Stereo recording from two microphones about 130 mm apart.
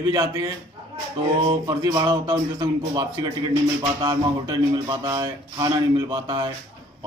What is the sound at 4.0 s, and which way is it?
A man's voice, 30° right (ahead or behind).